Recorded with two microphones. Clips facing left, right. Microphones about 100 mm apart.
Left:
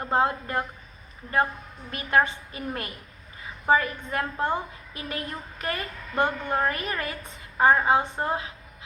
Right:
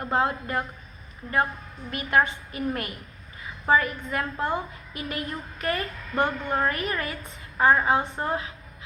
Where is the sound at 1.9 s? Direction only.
30° left (ahead or behind).